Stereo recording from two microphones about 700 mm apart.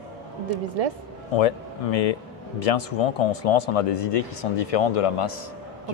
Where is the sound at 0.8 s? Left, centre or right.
Right.